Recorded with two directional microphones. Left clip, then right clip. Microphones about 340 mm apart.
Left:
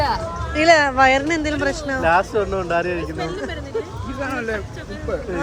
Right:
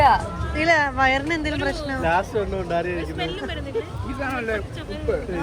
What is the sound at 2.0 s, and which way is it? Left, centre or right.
Speech, left.